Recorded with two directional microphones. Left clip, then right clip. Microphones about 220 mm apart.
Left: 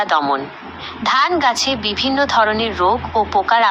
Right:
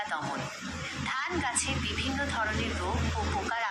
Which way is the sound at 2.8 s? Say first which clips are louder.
Left 17 dB; 35° left (ahead or behind).